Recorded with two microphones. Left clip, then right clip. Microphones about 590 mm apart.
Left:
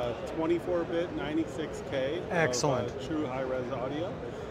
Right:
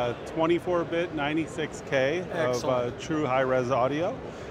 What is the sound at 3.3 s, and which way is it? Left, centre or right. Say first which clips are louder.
Speech: right 8 dB; right.